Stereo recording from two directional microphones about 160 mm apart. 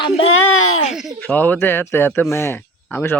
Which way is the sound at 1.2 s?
10° left (ahead or behind).